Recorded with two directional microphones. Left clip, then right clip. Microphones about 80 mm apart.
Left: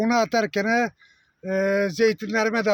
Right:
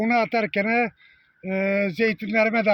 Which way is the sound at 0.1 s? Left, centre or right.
Left.